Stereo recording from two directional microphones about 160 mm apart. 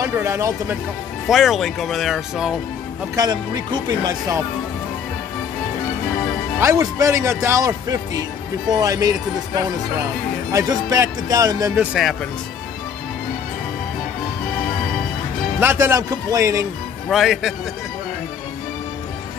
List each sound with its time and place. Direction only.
0.0 s a man's voice: 20° right (ahead or behind)
1.3 s speech: centre (ahead or behind)
3.2 s speech: 25° right (ahead or behind)
6.6 s speech: 20° right (ahead or behind)
10.5 s speech: 20° right (ahead or behind)
11.8 s speech: centre (ahead or behind)
15.6 s a man's voice: 15° right (ahead or behind)
17.1 s speech: centre (ahead or behind)